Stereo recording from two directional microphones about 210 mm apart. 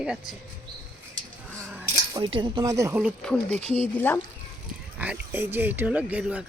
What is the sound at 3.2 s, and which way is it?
Speech, 5° left (ahead or behind).